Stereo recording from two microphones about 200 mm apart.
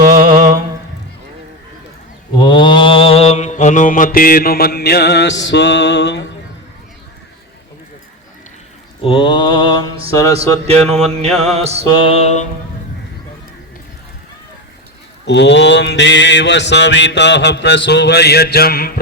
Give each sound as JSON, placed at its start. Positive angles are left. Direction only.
{"t": 0.0, "sound": "a sound", "side_deg": -45}
{"t": 2.4, "sound": "mantra", "side_deg": 25}
{"t": 9.0, "sound": "mantra", "side_deg": 25}
{"t": 10.3, "sound": "speech", "side_deg": -30}
{"t": 10.8, "sound": "mantra", "side_deg": -35}
{"t": 11.9, "sound": "mantra", "side_deg": 25}
{"t": 15.3, "sound": "mantra", "side_deg": 60}